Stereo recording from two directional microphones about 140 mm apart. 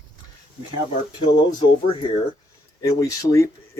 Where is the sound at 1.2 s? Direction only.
35° left (ahead or behind).